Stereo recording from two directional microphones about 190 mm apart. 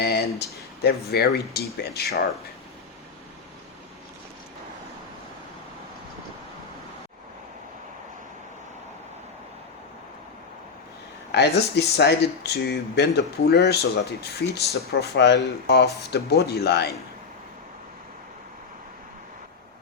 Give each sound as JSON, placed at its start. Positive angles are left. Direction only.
{"t": 0.0, "sound": "speech", "side_deg": 60}
{"t": 11.3, "sound": "speech", "side_deg": 60}